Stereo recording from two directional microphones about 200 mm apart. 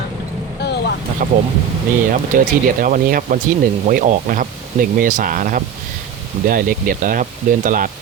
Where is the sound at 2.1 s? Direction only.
45° right (ahead or behind).